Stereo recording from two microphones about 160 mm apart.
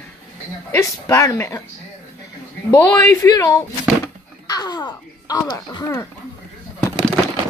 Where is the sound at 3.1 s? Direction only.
20° left (ahead or behind).